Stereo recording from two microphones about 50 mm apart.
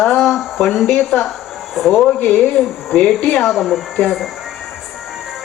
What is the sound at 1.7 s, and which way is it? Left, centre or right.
Speech, centre.